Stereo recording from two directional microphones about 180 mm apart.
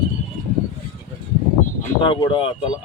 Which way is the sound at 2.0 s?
25° left (ahead or behind).